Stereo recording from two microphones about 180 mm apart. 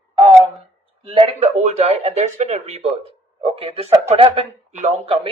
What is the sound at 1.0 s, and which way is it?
Speech, 30° right (ahead or behind).